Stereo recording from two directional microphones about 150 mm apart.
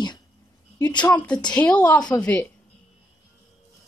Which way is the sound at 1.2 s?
5° left (ahead or behind).